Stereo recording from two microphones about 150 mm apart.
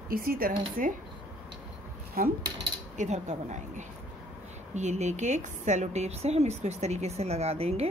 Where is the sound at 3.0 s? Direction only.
50° right (ahead or behind).